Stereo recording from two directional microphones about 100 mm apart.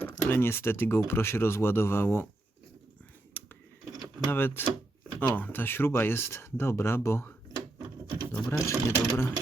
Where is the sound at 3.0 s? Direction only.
20° left (ahead or behind).